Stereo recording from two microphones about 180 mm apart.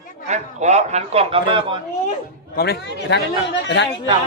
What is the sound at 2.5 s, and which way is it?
Speech, 60° left (ahead or behind).